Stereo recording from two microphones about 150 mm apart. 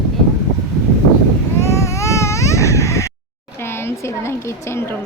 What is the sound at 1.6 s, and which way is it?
Baby cry, 20° left (ahead or behind).